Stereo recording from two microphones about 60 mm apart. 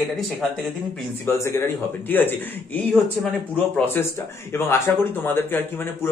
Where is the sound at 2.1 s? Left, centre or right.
Left.